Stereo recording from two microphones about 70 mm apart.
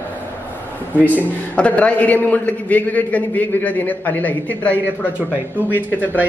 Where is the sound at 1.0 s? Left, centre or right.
Left.